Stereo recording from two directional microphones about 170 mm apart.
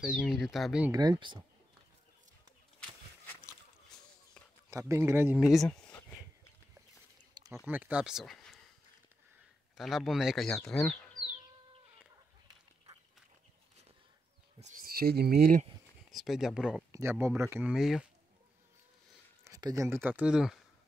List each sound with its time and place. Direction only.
0.0 s speech: 5° right (ahead or behind)
0.9 s speech: 25° right (ahead or behind)
3.9 s a sound: 5° left (ahead or behind)
4.6 s speech: 15° right (ahead or behind)
5.7 s a sound: 10° left (ahead or behind)
7.5 s speech: 10° right (ahead or behind)
9.8 s speech: centre (ahead or behind)
12.4 s goat: 25° right (ahead or behind)
14.6 s a sound: 55° right (ahead or behind)
16.1 s speech: centre (ahead or behind)
16.9 s speech: 15° right (ahead or behind)
19.4 s speech: 20° right (ahead or behind); by 20.5 s 5° right (ahead or behind)